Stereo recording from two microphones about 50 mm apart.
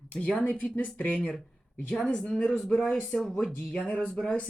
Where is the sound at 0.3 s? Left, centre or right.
Left; by 3.3 s centre.